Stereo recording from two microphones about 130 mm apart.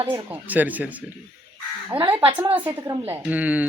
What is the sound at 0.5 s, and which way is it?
Speech, 15° right (ahead or behind).